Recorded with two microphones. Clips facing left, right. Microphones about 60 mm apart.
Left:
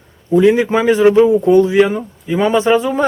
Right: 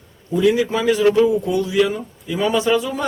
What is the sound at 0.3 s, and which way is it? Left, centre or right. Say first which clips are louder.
A man's voice: left 6 dB; left.